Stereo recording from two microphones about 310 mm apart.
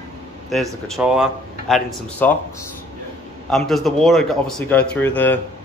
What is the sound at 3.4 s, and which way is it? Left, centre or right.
Speech, centre.